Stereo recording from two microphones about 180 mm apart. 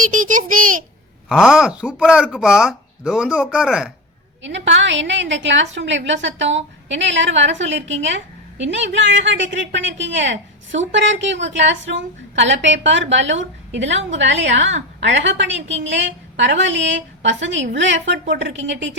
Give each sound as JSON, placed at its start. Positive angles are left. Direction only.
{"t": 0.1, "sound": "a child's voice", "side_deg": -45}
{"t": 1.3, "sound": "speech", "side_deg": 0}
{"t": 4.4, "sound": "a woman's voice", "side_deg": -90}